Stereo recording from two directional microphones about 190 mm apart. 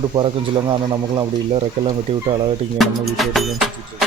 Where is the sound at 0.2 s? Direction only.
25° right (ahead or behind).